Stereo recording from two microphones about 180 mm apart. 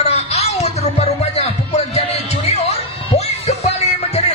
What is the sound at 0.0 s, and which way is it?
Music, 35° left (ahead or behind).